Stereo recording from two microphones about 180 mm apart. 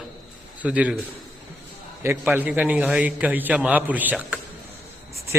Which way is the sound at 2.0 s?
10° right (ahead or behind).